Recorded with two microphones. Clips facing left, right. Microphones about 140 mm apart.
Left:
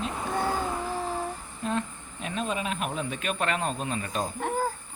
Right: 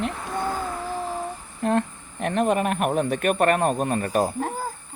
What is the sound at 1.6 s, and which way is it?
Speech, 60° right (ahead or behind).